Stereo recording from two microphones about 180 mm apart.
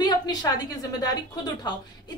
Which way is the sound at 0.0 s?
20° left (ahead or behind).